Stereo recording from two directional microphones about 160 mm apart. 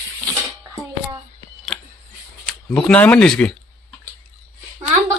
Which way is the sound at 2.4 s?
5° left (ahead or behind).